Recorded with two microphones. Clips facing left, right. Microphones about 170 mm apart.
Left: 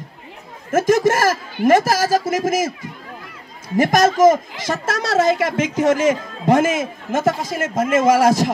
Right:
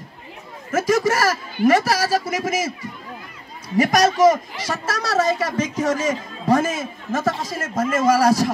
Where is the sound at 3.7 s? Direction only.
50° left (ahead or behind).